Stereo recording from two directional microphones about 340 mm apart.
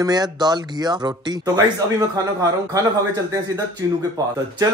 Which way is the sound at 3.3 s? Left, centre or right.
Centre.